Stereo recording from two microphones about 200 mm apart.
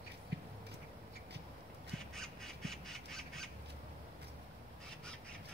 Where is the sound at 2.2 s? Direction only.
Centre (ahead or behind).